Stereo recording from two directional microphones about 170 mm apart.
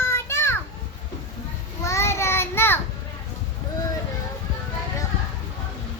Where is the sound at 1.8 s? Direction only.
15° left (ahead or behind).